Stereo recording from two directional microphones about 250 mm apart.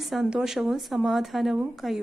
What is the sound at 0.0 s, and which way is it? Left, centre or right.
A woman's voice, centre.